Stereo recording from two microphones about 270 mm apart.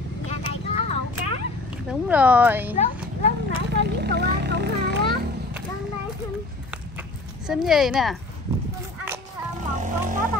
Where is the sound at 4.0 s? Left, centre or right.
Right.